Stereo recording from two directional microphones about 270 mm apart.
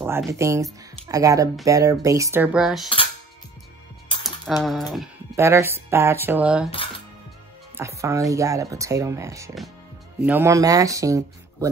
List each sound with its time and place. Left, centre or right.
0.0 s speech: centre
4.1 s music: centre
4.5 s speech: centre
7.7 s speech: centre